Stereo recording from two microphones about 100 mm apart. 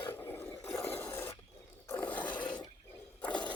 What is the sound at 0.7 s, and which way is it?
Filing, 25° left (ahead or behind).